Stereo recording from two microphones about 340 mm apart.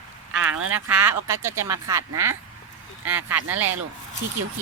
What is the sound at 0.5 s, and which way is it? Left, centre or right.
Speech, right.